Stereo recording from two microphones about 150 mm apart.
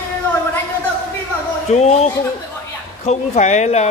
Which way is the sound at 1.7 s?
45° left (ahead or behind).